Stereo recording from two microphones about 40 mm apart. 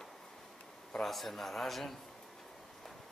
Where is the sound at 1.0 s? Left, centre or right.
Centre.